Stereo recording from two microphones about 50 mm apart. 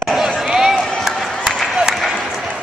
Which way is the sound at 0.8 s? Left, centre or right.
Centre.